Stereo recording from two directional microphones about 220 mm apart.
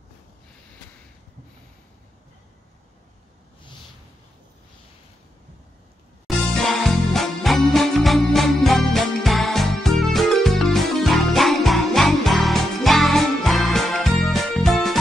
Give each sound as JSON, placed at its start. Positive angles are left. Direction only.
{"t": 6.8, "sound": "music", "side_deg": 0}